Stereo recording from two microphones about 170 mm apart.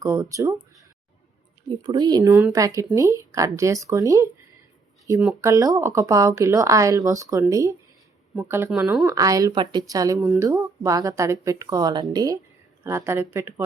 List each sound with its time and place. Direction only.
0.0 s speech: 15° right (ahead or behind)
1.8 s speech: 25° right (ahead or behind); by 9.0 s 5° right (ahead or behind)
9.0 s speech: 20° right (ahead or behind)